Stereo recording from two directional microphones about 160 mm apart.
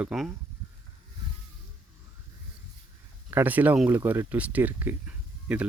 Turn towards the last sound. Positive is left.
turn(degrees=-10)  # may be behind; listen again after turning